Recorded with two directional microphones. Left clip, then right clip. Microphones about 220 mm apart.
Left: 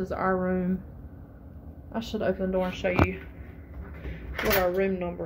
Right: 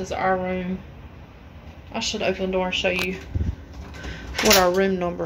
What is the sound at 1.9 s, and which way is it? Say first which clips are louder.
Speech: right 5 dB; 10° left (ahead or behind).